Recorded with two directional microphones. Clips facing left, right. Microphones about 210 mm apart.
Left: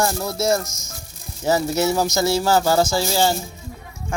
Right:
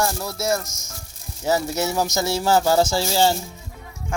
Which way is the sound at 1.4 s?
15° right (ahead or behind).